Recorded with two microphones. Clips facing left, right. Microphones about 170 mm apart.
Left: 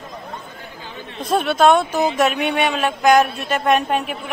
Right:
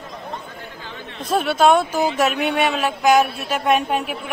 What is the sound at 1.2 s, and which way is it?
Speech, 5° right (ahead or behind).